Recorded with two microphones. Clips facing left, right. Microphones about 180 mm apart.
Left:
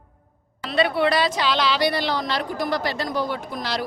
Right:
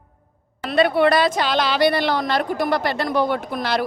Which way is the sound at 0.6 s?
50° right (ahead or behind).